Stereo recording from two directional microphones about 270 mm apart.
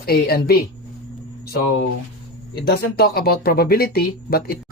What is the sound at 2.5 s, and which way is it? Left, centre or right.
Speech, left.